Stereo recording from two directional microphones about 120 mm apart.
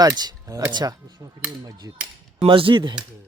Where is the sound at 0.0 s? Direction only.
35° right (ahead or behind).